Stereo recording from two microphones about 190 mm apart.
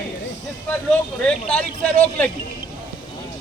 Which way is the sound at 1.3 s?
5° left (ahead or behind).